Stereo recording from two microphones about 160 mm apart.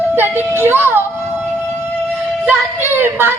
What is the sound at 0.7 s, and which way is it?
Music, 15° right (ahead or behind).